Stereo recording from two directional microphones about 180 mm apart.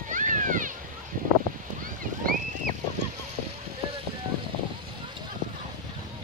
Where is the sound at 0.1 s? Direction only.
45° right (ahead or behind).